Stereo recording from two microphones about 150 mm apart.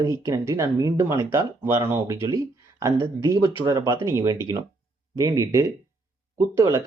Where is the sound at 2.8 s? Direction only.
25° right (ahead or behind).